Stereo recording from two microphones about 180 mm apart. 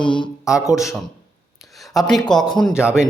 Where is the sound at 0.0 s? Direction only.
25° left (ahead or behind).